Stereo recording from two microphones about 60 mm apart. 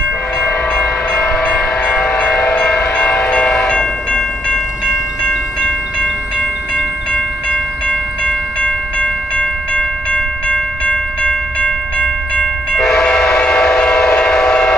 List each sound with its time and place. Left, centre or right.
0.4 s train: centre
12.7 s train: centre